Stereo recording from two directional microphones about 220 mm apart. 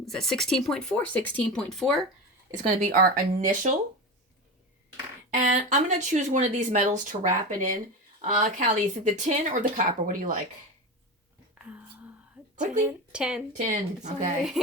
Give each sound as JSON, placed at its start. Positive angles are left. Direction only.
{"t": 0.0, "sound": "speech", "side_deg": 0}
{"t": 2.5, "sound": "speech", "side_deg": -35}
{"t": 5.3, "sound": "speech", "side_deg": -35}
{"t": 11.5, "sound": "whispering", "side_deg": -5}
{"t": 13.1, "sound": "speech", "side_deg": -5}
{"t": 13.6, "sound": "speech", "side_deg": -35}